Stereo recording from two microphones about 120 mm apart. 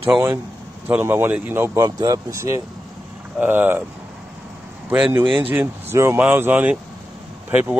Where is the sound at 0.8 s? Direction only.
20° right (ahead or behind).